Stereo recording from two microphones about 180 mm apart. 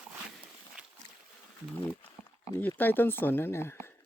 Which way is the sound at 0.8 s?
5° right (ahead or behind).